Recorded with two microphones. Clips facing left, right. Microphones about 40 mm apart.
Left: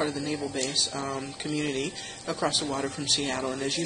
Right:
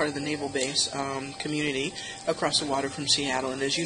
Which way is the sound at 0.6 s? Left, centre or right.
Right.